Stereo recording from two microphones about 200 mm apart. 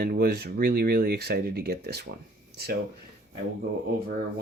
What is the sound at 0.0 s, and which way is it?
Speech, 50° right (ahead or behind).